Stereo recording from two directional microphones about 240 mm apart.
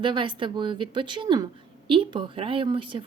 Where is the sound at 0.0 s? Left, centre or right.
Right.